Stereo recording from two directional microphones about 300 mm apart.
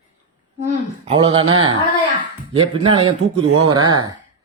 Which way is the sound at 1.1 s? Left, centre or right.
Centre.